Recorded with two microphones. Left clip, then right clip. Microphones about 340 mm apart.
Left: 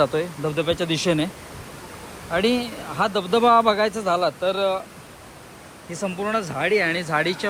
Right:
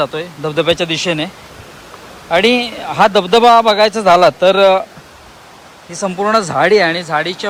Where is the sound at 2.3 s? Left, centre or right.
Centre.